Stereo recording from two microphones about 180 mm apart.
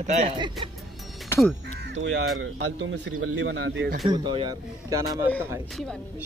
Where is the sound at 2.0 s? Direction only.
90° right; by 4.0 s 70° right (ahead or behind).